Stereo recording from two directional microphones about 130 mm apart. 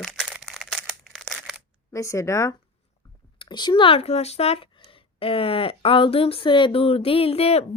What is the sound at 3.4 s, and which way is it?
Speech, 35° left (ahead or behind).